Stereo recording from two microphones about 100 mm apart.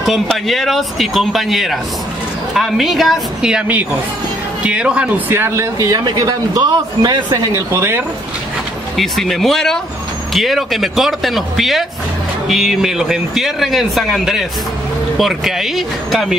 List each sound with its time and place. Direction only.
0.3 s a man's voice: centre (ahead or behind); by 7.3 s 40° right (ahead or behind)
7.5 s speech: 25° right (ahead or behind)
8.9 s a man's voice: centre (ahead or behind)